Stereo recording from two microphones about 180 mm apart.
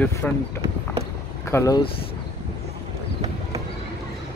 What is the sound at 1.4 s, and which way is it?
Speech, 15° left (ahead or behind).